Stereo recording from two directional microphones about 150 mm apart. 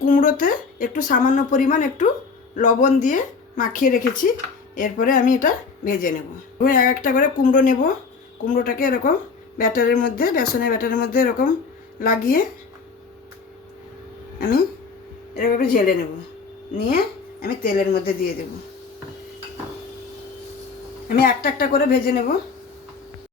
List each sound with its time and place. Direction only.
0.0 s speech: 60° left (ahead or behind)
14.3 s speech: 80° left
16.7 s a woman's voice: 90° left
21.1 s a woman's voice: 75° left (ahead or behind)